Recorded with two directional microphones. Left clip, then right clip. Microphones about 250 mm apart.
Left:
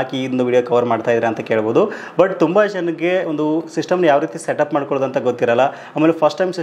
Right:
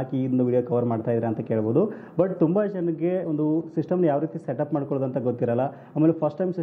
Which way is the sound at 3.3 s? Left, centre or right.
Left.